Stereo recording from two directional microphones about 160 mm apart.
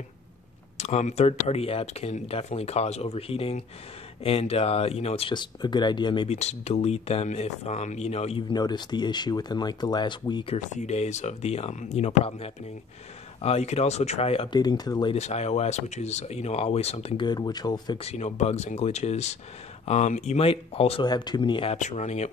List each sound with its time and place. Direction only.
0.7 s speech: 45° left (ahead or behind); by 6.2 s 30° left (ahead or behind)
6.2 s speech: 45° left (ahead or behind)
10.7 s speech: 45° left (ahead or behind)
14.6 s speech: 25° left (ahead or behind)
15.1 s speech: 45° left (ahead or behind)
17.3 s speech: 25° left (ahead or behind)
18.0 s speech: 45° left (ahead or behind)
21.1 s speech: 25° left (ahead or behind)
21.7 s speech: 45° left (ahead or behind)